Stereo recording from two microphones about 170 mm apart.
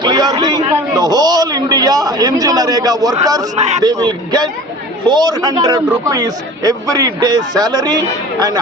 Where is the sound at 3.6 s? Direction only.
40° right (ahead or behind).